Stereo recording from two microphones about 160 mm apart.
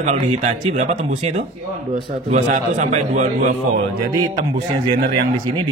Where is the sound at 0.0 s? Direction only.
45° right (ahead or behind).